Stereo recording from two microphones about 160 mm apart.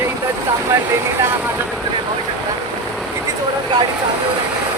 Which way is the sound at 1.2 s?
15° right (ahead or behind).